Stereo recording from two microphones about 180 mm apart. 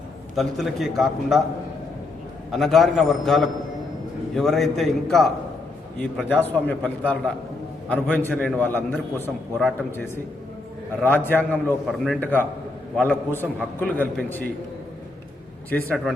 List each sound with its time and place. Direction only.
0.3 s a man's voice: centre (ahead or behind)
2.5 s a man's voice: centre (ahead or behind)
11.0 s a man's voice: 10° left (ahead or behind)
11.9 s a man's voice: 5° right (ahead or behind)
12.2 s a man's voice: 10° left (ahead or behind)
15.7 s a man's voice: 5° left (ahead or behind)